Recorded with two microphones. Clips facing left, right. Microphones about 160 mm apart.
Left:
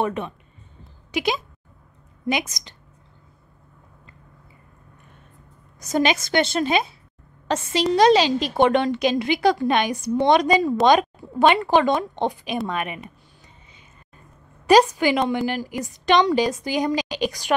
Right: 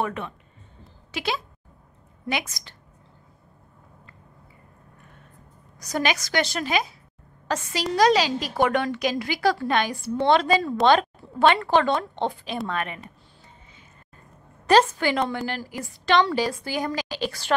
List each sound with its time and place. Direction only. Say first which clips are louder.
0.0 s a woman's voice: left 4 dB; 20° left (ahead or behind)
5.8 s a woman's voice: left 5 dB; 20° left (ahead or behind)
14.7 s a woman's voice: left 3 dB; 15° left (ahead or behind)